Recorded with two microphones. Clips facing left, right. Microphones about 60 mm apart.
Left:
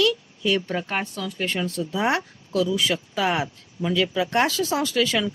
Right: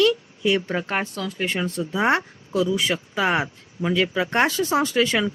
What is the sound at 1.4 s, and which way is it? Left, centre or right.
Speech, centre.